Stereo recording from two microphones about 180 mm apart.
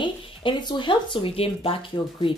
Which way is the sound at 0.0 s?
25° left (ahead or behind).